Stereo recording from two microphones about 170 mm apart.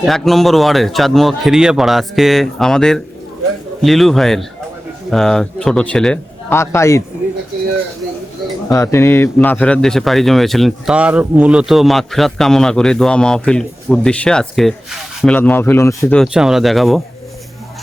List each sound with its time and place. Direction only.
0.0 s a man's voice: centre (ahead or behind); by 7.0 s 15° left (ahead or behind)
8.7 s a man's voice: 15° left (ahead or behind); by 15.4 s centre (ahead or behind)
15.4 s a man's voice: 10° left (ahead or behind)
16.1 s a man's voice: centre (ahead or behind)